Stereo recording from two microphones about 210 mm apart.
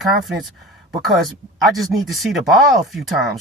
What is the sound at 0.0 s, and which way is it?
Speech, centre (ahead or behind).